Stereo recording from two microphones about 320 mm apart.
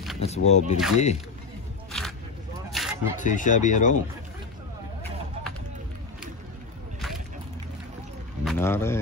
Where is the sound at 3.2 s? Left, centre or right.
Left.